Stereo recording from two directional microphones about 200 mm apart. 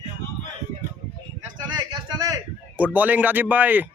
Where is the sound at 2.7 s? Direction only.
10° right (ahead or behind).